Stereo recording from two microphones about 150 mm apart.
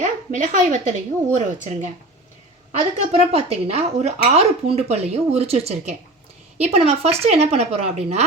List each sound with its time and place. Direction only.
0.0 s speech: 55° right (ahead or behind)